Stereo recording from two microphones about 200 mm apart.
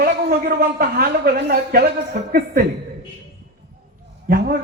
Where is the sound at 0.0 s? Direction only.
50° right (ahead or behind).